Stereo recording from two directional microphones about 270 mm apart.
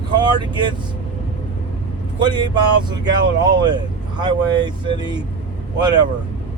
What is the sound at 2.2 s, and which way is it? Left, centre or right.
Speech, centre.